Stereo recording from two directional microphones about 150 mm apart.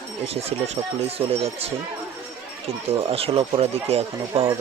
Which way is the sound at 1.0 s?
40° right (ahead or behind).